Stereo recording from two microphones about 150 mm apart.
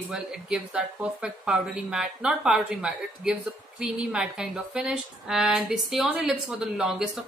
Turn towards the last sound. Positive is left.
turn(degrees=-5)  # may be behind; listen again after turning